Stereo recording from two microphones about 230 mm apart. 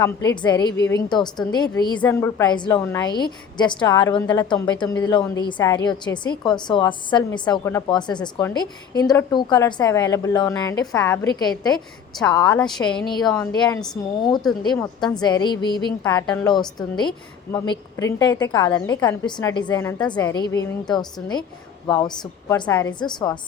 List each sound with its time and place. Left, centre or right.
0.4 s a woman's voice: centre
12.3 s a woman's voice: centre
12.8 s speech: centre
13.1 s a woman's voice: centre
13.3 s a woman's voice: centre
14.4 s speech: centre
15.0 s a woman's voice: centre
16.2 s a woman's voice: centre
16.5 s a woman's voice: centre